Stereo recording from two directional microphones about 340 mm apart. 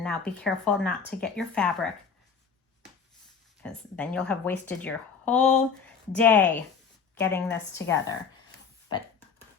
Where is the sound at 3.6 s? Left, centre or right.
Centre.